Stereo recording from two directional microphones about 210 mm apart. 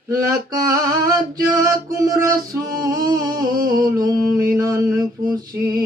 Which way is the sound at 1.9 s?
15° right (ahead or behind).